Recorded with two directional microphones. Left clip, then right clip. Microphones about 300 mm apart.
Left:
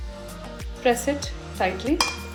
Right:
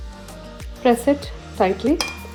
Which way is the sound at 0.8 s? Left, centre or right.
Right.